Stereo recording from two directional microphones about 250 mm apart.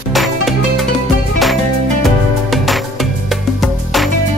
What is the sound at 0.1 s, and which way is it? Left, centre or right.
Music, centre.